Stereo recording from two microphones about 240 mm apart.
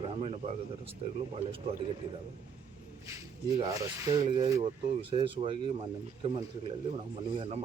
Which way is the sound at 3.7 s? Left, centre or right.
Centre.